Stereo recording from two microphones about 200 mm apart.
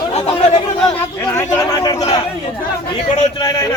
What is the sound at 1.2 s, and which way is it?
Speech, 15° left (ahead or behind).